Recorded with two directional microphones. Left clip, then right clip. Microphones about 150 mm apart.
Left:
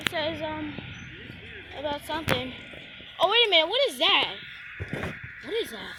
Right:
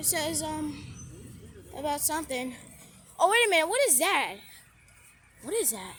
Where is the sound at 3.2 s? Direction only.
45° right (ahead or behind).